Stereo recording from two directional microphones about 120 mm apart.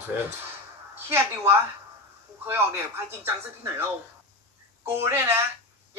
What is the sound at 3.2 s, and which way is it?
Speech, 20° right (ahead or behind).